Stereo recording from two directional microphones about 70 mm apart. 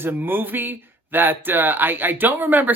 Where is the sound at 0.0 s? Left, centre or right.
Right.